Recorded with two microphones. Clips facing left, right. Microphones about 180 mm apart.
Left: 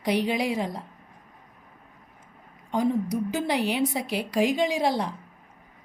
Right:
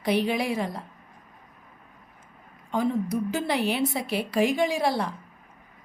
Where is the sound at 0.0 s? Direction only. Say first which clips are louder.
Even; 15° left (ahead or behind).